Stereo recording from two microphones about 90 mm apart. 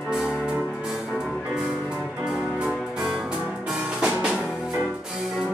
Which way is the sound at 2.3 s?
10° right (ahead or behind).